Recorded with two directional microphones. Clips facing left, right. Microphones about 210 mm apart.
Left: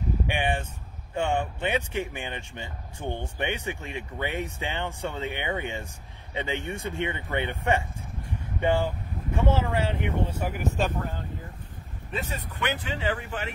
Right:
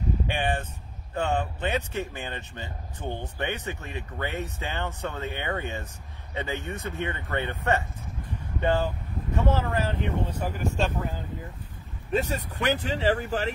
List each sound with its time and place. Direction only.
0.3 s speech: 10° left (ahead or behind)
12.1 s speech: 40° right (ahead or behind)